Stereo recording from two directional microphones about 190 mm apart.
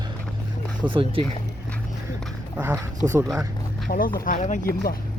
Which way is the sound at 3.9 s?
50° left (ahead or behind).